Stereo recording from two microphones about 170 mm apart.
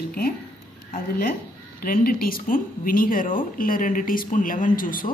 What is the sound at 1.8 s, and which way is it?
A woman's voice, 60° left (ahead or behind).